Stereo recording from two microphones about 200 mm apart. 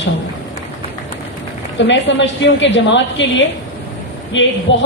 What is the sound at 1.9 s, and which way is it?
Speech, 65° left (ahead or behind).